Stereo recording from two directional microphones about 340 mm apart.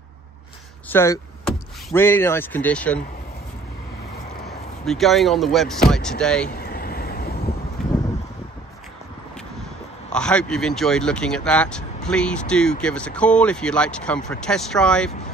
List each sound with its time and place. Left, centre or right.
0.8 s speech: centre
4.8 s speech: centre
6.5 s vehicle: left
7.8 s a sound: centre
10.1 s speech: centre